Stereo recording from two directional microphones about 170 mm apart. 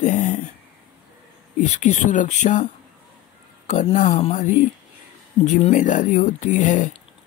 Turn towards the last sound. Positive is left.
turn(degrees=45)  # may be behind; listen again after turning